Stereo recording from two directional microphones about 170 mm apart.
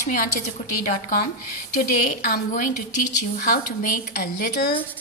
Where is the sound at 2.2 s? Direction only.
55° left (ahead or behind).